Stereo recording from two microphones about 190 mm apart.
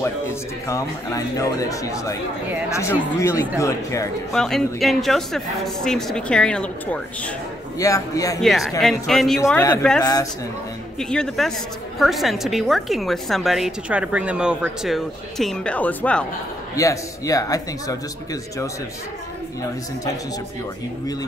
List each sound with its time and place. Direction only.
0.0 s speech: 15° left (ahead or behind)
4.3 s a woman's voice: centre (ahead or behind)
7.8 s speech: 15° left (ahead or behind)
8.4 s a woman's voice: centre (ahead or behind)
9.4 s a woman's voice: 15° left (ahead or behind)